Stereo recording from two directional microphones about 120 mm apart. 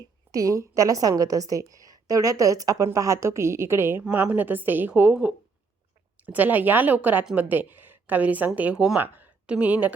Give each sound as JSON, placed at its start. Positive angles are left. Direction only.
{"t": 0.3, "sound": "a woman's voice", "side_deg": -25}